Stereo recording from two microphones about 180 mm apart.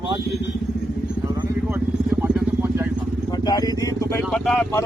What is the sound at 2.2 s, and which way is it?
Vehicle, 10° right (ahead or behind).